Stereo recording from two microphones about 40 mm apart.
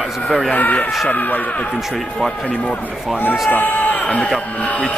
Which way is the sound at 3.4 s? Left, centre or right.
Left.